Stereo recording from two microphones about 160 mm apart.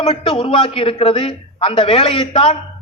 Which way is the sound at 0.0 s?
35° left (ahead or behind).